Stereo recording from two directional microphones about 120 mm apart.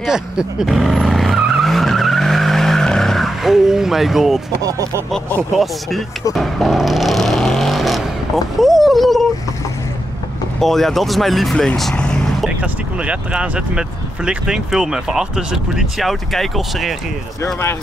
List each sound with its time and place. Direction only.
0.0 s vehicle: 5° right (ahead or behind)
4.6 s speech: 25° right (ahead or behind)
5.6 s speech: centre (ahead or behind)
6.3 s vehicle: centre (ahead or behind)
8.5 s a sound: centre (ahead or behind)
10.6 s speech: centre (ahead or behind)
12.6 s speech: 10° right (ahead or behind)